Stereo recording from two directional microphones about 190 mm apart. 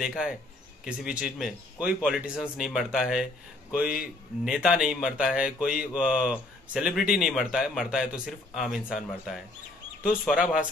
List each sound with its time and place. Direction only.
0.0 s speech: 5° right (ahead or behind)